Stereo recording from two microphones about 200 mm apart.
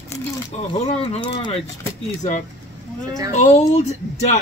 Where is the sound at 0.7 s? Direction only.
30° left (ahead or behind).